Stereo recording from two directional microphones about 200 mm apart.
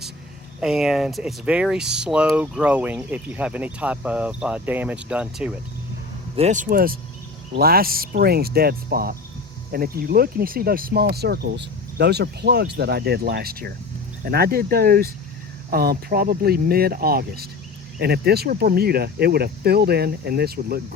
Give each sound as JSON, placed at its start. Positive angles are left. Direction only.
{"t": 0.6, "sound": "speech", "side_deg": 0}
{"t": 6.3, "sound": "speech", "side_deg": -35}